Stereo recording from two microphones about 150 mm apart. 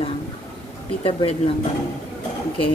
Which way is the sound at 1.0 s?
35° left (ahead or behind).